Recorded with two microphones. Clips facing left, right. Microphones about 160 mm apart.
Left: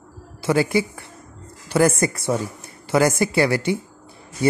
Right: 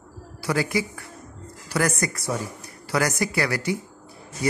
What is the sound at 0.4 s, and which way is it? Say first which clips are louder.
Speech: left 5 dB; 25° left (ahead or behind).